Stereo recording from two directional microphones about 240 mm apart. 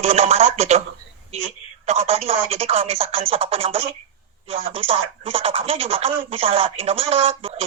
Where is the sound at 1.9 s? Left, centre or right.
Right.